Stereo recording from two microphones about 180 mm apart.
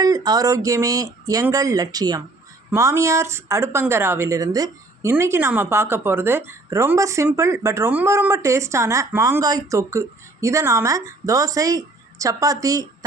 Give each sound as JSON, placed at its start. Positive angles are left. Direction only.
{"t": 0.0, "sound": "speech", "side_deg": -20}